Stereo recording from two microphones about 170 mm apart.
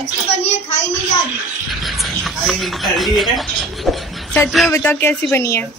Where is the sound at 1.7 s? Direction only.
Centre (ahead or behind).